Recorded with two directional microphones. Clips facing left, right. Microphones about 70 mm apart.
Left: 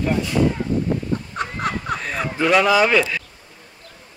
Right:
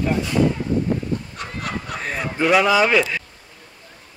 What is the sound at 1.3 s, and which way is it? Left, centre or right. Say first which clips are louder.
Fowl: left 4 dB; left.